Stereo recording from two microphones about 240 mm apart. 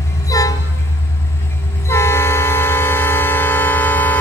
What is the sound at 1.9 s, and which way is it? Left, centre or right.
Train, centre.